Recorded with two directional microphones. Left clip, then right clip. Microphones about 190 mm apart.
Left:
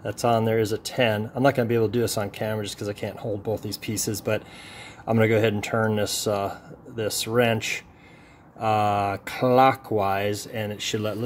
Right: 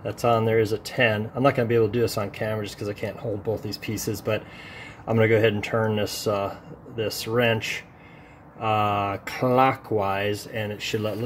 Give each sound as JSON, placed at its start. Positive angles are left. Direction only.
{"t": 0.2, "sound": "speech", "side_deg": 20}
{"t": 3.8, "sound": "speech", "side_deg": 90}
{"t": 5.0, "sound": "speech", "side_deg": 20}
{"t": 8.5, "sound": "speech", "side_deg": 15}